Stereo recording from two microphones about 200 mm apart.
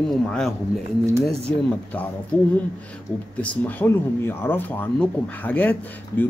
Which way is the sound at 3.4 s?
10° left (ahead or behind).